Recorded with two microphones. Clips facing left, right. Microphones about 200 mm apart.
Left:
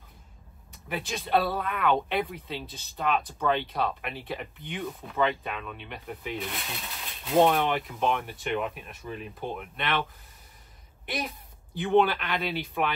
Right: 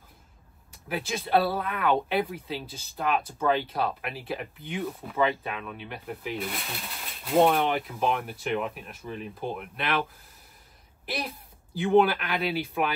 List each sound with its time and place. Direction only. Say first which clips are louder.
0.8 s speech: right 2 dB; centre (ahead or behind)
11.8 s speech: right 2 dB; 5° right (ahead or behind)